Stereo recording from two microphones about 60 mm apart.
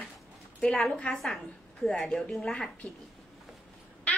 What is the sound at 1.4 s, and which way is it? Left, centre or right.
A woman's voice, centre.